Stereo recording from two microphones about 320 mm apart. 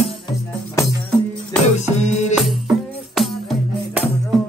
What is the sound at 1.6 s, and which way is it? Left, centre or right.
Music, left.